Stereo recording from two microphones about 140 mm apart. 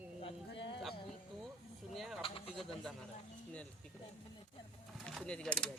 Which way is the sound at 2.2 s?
40° left (ahead or behind).